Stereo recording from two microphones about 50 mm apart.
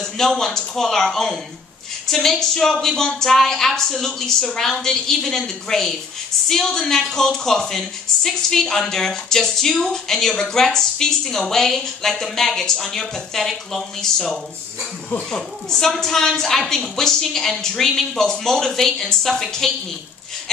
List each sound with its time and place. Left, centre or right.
0.0 s a woman's voice: centre